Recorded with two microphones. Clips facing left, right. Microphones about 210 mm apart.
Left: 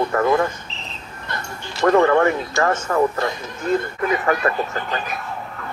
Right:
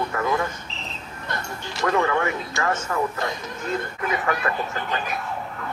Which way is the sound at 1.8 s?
50° left (ahead or behind).